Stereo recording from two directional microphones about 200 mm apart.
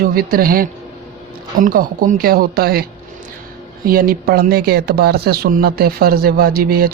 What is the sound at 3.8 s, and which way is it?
Speech, 45° right (ahead or behind).